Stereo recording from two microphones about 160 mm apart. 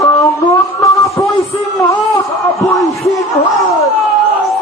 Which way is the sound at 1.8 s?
20° left (ahead or behind).